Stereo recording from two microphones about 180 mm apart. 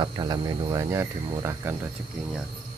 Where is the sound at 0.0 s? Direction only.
25° right (ahead or behind).